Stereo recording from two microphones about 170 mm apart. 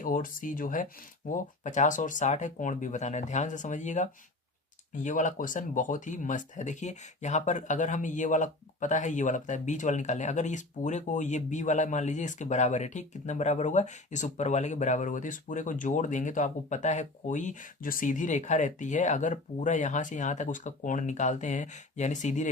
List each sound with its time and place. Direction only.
0.0 s speech: 55° left (ahead or behind)